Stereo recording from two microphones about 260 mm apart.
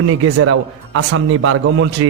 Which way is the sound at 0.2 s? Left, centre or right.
Right.